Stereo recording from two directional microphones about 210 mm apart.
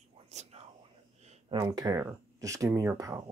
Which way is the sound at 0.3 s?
30° right (ahead or behind).